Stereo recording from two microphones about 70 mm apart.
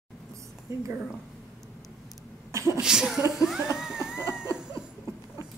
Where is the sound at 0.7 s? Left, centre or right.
Right.